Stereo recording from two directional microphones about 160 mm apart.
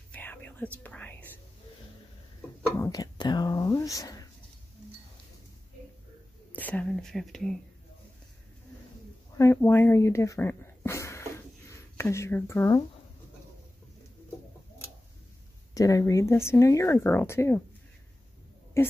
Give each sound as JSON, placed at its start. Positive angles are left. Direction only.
{"t": 0.1, "sound": "whispering", "side_deg": 10}
{"t": 2.8, "sound": "whispering", "side_deg": 25}
{"t": 6.5, "sound": "speech", "side_deg": 10}
{"t": 9.4, "sound": "speech", "side_deg": 15}
{"t": 15.7, "sound": "speech", "side_deg": 20}
{"t": 18.8, "sound": "speech", "side_deg": 15}